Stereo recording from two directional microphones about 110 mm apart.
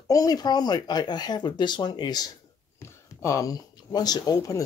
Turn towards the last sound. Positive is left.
turn(degrees=35)  # may be behind; listen again after turning